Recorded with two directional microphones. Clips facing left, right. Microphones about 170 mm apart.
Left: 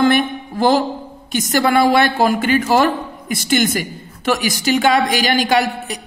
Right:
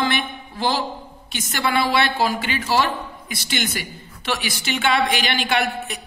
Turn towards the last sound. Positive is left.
turn(degrees=35)  # may be behind; listen again after turning